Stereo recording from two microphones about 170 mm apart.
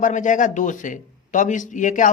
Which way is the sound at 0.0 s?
50° left (ahead or behind).